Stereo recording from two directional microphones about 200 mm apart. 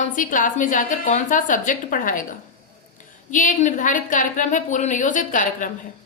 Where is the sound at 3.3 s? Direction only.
40° left (ahead or behind).